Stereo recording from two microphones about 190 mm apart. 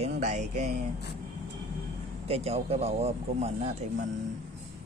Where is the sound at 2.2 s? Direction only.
30° right (ahead or behind).